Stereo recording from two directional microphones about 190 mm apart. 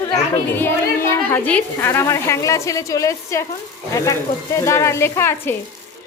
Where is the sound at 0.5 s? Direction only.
10° left (ahead or behind).